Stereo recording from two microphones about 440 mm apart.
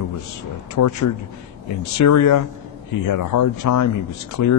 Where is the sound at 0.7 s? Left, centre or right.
Left.